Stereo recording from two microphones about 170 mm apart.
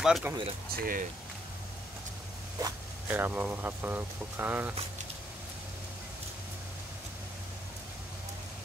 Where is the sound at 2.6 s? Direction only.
10° right (ahead or behind).